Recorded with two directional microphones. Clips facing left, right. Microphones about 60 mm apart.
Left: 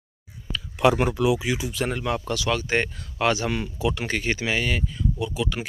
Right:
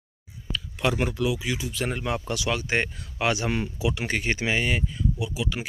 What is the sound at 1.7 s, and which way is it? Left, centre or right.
Speech, centre.